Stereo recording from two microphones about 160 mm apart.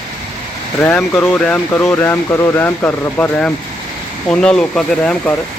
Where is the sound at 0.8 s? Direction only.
10° left (ahead or behind).